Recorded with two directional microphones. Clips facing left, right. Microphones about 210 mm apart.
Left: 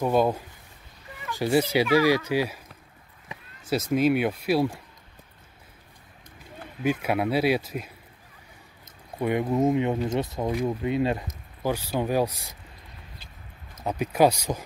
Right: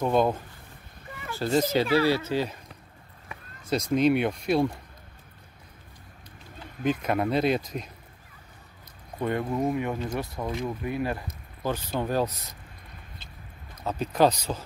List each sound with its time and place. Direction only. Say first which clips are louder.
0.0 s speech: left 1 dB; 5° left (ahead or behind)
3.7 s speech: even; 5° left (ahead or behind)
6.8 s speech: left 1 dB; 10° left (ahead or behind)
9.2 s speech: left 4 dB; 15° left (ahead or behind)
11.6 s speech: left 2 dB; 10° left (ahead or behind)
13.8 s speech: left 2 dB; 10° left (ahead or behind)